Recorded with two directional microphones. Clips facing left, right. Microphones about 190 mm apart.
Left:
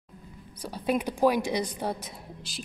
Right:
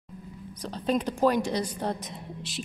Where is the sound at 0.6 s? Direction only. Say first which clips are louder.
Right 1 dB; 10° left (ahead or behind).